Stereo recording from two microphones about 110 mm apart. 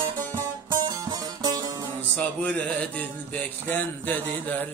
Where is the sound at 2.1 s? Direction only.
15° left (ahead or behind).